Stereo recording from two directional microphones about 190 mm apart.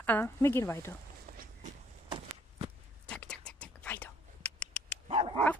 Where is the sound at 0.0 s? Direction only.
10° left (ahead or behind).